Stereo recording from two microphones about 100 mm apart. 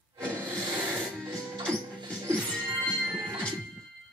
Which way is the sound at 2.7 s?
25° right (ahead or behind).